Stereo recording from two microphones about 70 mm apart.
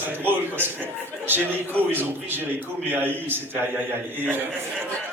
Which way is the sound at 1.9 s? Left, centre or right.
Right.